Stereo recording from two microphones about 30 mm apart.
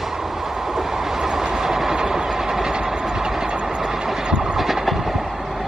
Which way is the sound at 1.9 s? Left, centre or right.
Right.